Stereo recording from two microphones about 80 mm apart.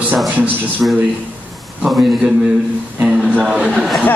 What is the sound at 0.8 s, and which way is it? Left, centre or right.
Speech, centre.